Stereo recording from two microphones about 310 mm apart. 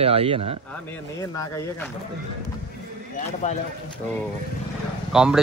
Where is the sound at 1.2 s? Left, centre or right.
Centre.